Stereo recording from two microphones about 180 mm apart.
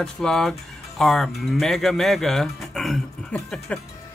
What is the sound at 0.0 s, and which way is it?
Speech, 5° left (ahead or behind).